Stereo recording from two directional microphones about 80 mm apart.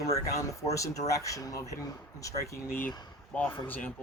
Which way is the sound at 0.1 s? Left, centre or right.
Left.